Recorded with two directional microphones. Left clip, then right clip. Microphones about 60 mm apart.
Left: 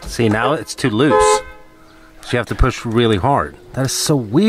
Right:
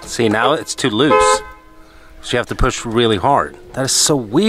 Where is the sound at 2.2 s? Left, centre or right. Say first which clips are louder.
Right 1 dB; right.